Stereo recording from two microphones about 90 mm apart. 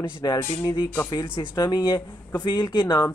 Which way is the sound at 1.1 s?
55° left (ahead or behind).